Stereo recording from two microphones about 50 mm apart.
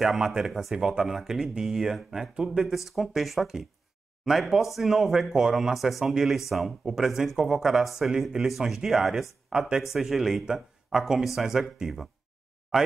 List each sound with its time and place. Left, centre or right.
0.0 s speech: centre
2.7 s speech: centre
9.5 s speech: centre